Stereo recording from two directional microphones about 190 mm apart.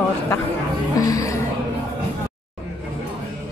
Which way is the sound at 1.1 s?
15° left (ahead or behind).